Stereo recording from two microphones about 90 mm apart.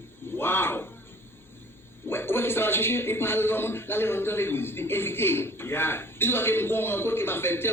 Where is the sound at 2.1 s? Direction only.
25° left (ahead or behind).